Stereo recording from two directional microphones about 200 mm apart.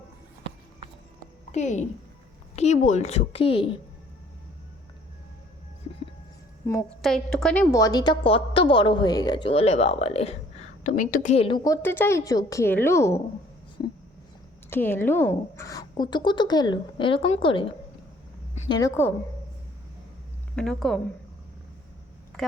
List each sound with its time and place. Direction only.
1.5 s a woman's voice: 35° left (ahead or behind)
7.0 s a woman's voice: centre (ahead or behind)
14.7 s a woman's voice: 10° left (ahead or behind)
20.6 s speech: centre (ahead or behind)
22.3 s a sound: 5° left (ahead or behind)